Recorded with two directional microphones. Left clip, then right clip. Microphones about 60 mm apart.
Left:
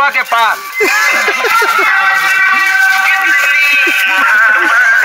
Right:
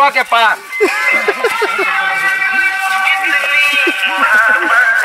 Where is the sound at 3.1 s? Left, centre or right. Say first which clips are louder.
Left 4 dB; right.